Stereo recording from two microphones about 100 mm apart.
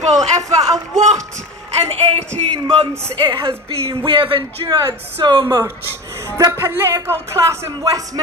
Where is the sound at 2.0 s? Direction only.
90° right.